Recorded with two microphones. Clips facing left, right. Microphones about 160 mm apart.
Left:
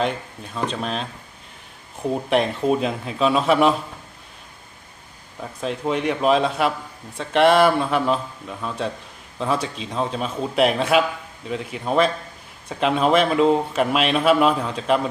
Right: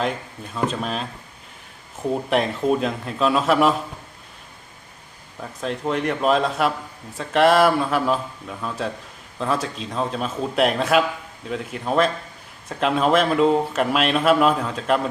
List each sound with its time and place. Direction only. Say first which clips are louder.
0.0 s speech: left 1 dB; centre (ahead or behind)
5.4 s speech: left 1 dB; centre (ahead or behind)